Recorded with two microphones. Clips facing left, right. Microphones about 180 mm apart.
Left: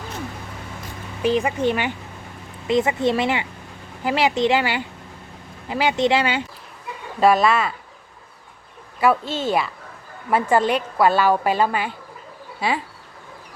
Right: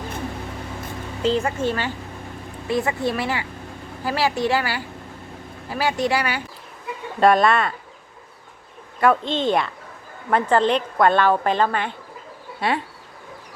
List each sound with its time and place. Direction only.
1.2 s a woman's voice: 15° left (ahead or behind)
7.2 s speech: centre (ahead or behind)
9.0 s a woman's voice: 5° left (ahead or behind)